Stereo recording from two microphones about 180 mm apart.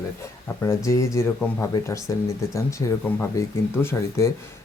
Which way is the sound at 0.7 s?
15° left (ahead or behind).